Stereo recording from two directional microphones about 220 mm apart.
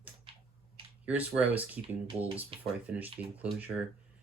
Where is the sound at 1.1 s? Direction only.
5° right (ahead or behind).